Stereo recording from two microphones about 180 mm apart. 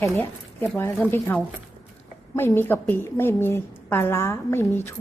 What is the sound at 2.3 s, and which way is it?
A woman's voice, 10° left (ahead or behind).